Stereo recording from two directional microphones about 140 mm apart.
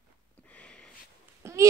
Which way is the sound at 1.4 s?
20° right (ahead or behind).